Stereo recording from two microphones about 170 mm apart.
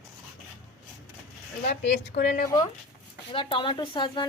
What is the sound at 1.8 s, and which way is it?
Speech, 90° left.